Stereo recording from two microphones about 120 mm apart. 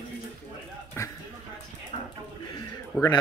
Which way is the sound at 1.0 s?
20° left (ahead or behind).